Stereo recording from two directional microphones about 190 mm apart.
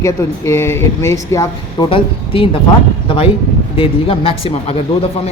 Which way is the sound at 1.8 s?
30° left (ahead or behind).